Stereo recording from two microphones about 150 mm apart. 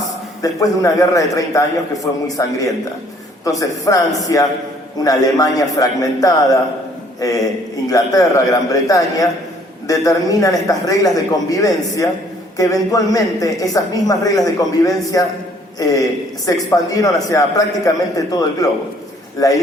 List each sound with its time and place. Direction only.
0.4 s a man's voice: 25° left (ahead or behind)